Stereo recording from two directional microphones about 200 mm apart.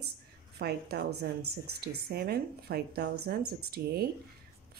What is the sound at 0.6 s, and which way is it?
A woman's voice, 55° right (ahead or behind).